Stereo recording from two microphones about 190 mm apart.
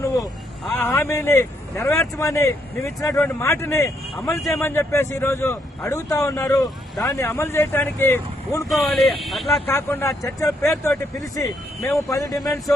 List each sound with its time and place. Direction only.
0.0 s vehicle: 15° left (ahead or behind)
0.7 s speech: 10° left (ahead or behind)
8.7 s speech: centre (ahead or behind)
9.6 s speech: 15° left (ahead or behind)